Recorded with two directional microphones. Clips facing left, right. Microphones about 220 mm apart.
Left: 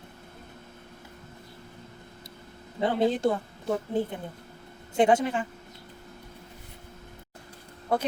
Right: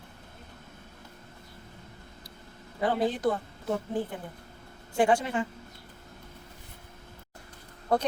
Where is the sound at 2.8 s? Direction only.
25° left (ahead or behind).